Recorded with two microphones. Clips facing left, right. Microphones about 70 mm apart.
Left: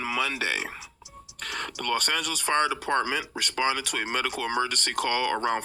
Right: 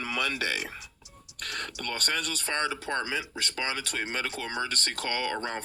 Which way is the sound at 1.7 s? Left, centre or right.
Left.